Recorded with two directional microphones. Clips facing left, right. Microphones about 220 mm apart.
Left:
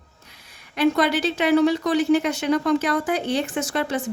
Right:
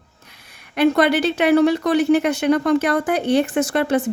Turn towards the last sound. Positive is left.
turn(degrees=-60)  # may be behind; listen again after turning